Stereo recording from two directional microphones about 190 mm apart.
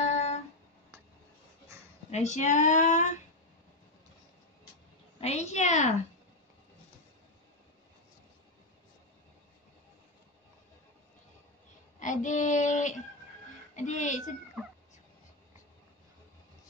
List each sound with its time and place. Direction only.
0.0 s a sound: 35° left (ahead or behind)
2.0 s speech: 35° left (ahead or behind)
5.2 s speech: 35° left (ahead or behind)
12.0 s speech: 40° left (ahead or behind)
14.6 s cat: 5° right (ahead or behind)